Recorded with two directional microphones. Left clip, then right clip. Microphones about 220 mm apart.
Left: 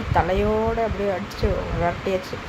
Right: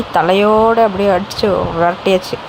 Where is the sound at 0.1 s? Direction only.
25° right (ahead or behind).